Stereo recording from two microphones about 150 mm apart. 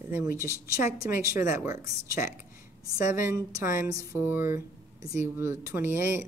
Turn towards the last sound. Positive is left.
turn(degrees=-15)  # may be behind; listen again after turning